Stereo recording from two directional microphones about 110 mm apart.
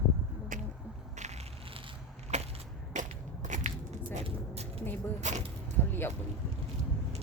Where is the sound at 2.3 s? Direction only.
90° right.